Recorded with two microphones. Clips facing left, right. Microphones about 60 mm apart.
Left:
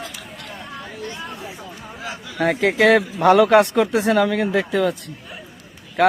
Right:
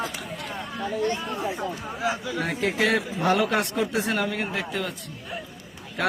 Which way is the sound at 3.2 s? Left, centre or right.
Left.